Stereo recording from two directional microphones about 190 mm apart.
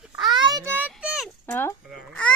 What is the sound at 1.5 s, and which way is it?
Speech, 10° left (ahead or behind).